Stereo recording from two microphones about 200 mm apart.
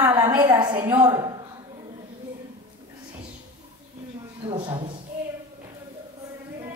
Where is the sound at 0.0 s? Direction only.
10° right (ahead or behind).